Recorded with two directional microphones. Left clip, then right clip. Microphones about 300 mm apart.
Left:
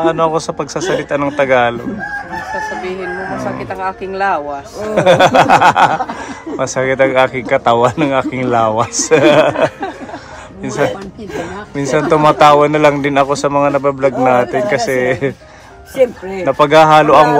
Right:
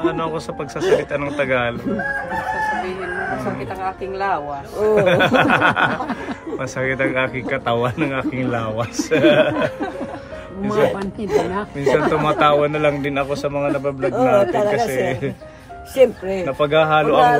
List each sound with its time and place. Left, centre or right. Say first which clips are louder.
0.0 s a man's voice: left 9 dB; centre
3.8 s speech: left 6 dB; left
4.9 s a man's voice: left 7 dB; centre
11.7 s a man's voice: left 5 dB; centre
16.4 s a man's voice: left 9 dB; left